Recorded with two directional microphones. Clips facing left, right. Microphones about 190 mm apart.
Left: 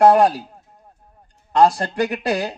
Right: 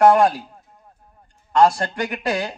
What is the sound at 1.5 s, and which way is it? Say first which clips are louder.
Speech: left 1 dB; 35° left (ahead or behind).